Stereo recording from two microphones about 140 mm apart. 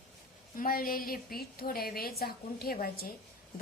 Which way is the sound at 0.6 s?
90° left.